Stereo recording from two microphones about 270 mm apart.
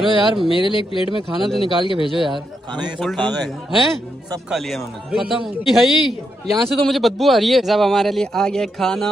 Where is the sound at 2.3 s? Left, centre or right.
Centre.